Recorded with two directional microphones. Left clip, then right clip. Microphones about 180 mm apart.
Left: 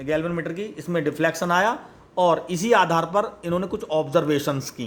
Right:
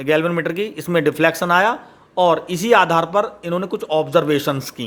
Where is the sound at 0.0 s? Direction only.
35° right (ahead or behind).